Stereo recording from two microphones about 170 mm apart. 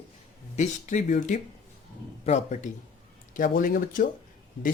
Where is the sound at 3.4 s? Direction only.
55° left (ahead or behind).